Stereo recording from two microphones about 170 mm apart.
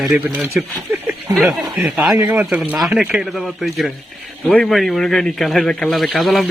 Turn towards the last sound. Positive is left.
turn(degrees=0)  # may be behind; listen again after turning